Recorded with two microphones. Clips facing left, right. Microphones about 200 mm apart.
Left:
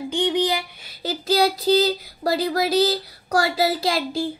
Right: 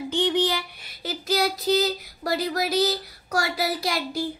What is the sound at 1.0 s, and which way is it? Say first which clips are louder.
Child singing: left 5 dB; 30° left (ahead or behind).